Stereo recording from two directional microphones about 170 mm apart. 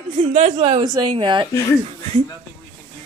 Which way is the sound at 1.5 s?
20° left (ahead or behind).